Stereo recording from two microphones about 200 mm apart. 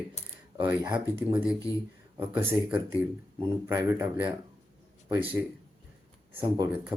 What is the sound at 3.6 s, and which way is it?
Speech, 15° right (ahead or behind).